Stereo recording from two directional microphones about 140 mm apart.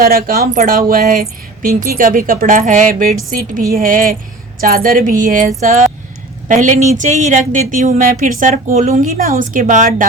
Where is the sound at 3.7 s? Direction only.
80° right.